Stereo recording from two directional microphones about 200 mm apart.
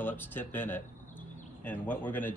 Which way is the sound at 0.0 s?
10° left (ahead or behind).